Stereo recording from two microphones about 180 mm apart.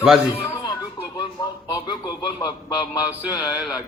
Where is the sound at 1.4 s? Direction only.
20° left (ahead or behind).